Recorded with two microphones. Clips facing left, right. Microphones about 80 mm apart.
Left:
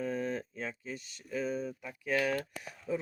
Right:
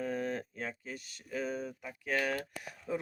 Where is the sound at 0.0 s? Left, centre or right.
Right.